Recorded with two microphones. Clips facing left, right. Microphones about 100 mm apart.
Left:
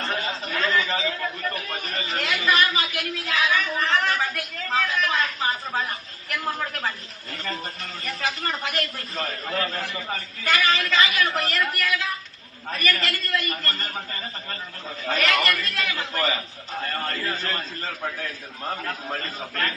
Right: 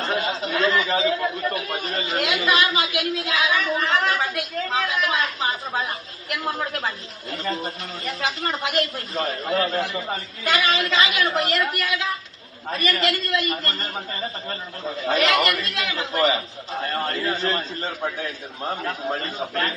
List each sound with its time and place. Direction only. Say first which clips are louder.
0.0 s a man's voice: right 4 dB; 15° right (ahead or behind)